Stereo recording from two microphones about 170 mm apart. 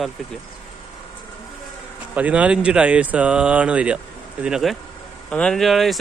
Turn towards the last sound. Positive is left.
turn(degrees=0)  # may be behind; listen again after turning